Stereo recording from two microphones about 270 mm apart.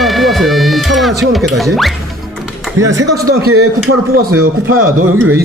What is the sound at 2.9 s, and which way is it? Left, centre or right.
Speech, right.